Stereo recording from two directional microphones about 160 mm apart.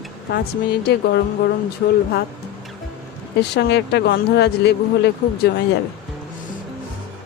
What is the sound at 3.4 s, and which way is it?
Speech, 90° left.